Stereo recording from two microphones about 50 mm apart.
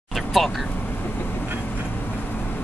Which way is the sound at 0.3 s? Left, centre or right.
Centre.